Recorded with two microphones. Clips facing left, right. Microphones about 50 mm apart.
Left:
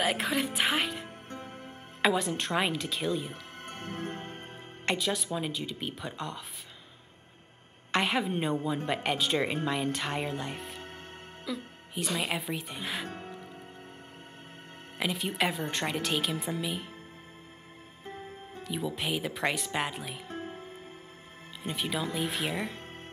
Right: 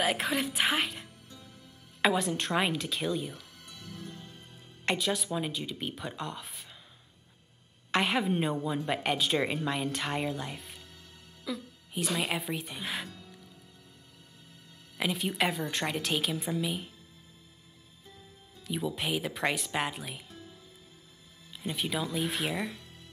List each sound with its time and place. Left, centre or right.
0.0 s speech: centre
1.0 s music: left
2.0 s speech: centre
3.3 s music: left
4.8 s speech: centre
7.9 s speech: centre
11.4 s speech: centre
13.1 s music: left
15.0 s speech: centre
18.0 s music: left
18.6 s speech: centre
20.2 s music: left
21.6 s speech: centre